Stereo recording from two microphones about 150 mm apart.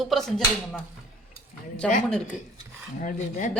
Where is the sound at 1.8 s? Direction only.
5° left (ahead or behind).